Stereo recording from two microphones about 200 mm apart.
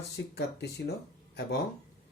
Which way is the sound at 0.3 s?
55° left (ahead or behind).